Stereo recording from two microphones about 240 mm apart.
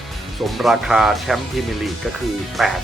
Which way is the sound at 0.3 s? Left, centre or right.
Centre.